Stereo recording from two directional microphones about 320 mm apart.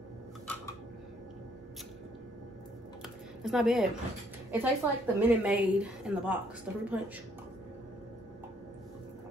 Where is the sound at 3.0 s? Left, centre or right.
Centre.